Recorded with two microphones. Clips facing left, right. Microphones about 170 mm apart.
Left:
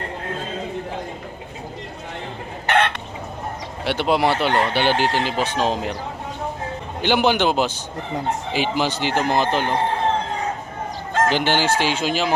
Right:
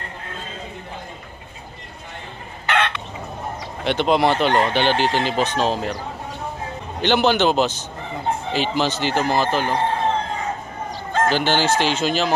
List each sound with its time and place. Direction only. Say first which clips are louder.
2.7 s chicken: left 2 dB; 50° left (ahead or behind)
3.8 s speech: right 1 dB; 10° left (ahead or behind)
7.0 s speech: right 1 dB; 10° left (ahead or behind)
11.2 s speech: right 1 dB; 15° left (ahead or behind)